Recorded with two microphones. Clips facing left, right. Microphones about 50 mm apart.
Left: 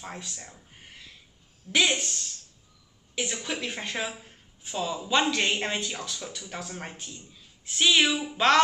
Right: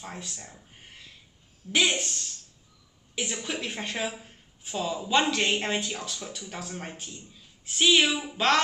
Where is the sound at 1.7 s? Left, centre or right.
Centre.